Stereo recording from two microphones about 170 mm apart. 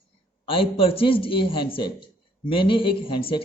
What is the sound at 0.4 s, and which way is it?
A man's voice, 35° left (ahead or behind).